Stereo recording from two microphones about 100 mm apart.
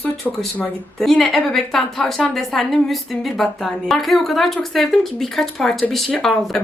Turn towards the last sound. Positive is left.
turn(degrees=5)  # may be behind; listen again after turning